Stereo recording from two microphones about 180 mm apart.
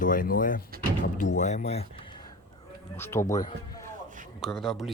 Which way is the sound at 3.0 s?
15° left (ahead or behind).